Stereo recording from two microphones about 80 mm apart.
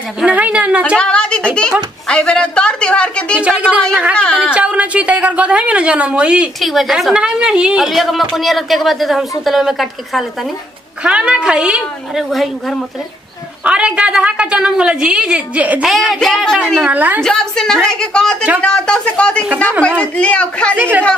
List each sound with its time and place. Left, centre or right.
0.2 s a woman's voice: centre
0.9 s a woman's voice: centre
2.0 s a sound: centre
3.3 s a woman's voice: centre
6.6 s a woman's voice: centre
13.7 s a woman's voice: centre
15.8 s a woman's voice: centre
16.7 s a woman's voice: right
17.2 s a woman's voice: centre
20.7 s a woman's voice: right